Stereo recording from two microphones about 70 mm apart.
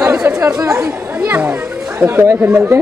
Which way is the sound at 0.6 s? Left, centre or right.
Right.